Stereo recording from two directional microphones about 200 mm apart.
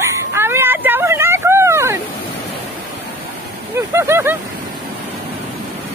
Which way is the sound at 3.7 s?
15° right (ahead or behind).